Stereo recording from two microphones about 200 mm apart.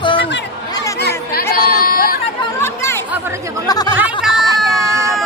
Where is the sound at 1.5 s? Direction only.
45° left (ahead or behind).